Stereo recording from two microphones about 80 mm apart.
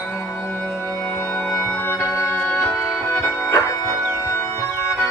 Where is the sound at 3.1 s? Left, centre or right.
Left.